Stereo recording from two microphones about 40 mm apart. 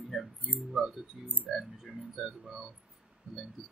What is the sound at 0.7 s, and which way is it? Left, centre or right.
Speech, centre.